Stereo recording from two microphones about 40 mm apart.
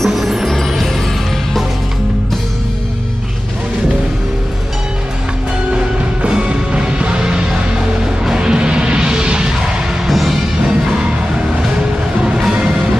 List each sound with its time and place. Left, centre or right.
0.0 s music: centre
6.4 s music: right
10.0 s music: centre